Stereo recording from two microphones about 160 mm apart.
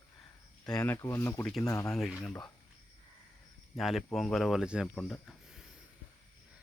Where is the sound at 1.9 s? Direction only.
Centre (ahead or behind).